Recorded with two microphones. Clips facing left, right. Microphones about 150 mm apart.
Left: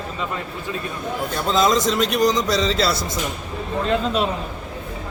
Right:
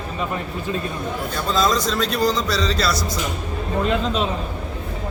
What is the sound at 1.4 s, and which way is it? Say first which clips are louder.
A man's voice: left 2 dB; 20° left (ahead or behind).